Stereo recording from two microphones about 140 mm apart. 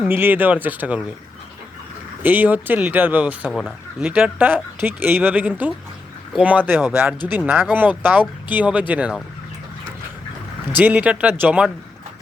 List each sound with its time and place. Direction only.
0.0 s speech: 15° right (ahead or behind)
2.2 s speech: 15° right (ahead or behind)
10.8 s speech: 10° right (ahead or behind)